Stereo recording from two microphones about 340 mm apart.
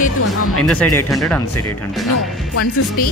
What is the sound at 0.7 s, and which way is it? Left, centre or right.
Speech, centre.